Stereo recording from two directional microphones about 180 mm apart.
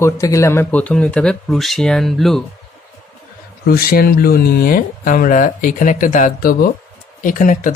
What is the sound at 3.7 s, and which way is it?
Speech, 55° left (ahead or behind).